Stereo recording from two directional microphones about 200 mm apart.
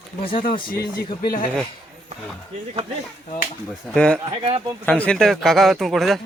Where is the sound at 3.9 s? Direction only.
5° left (ahead or behind).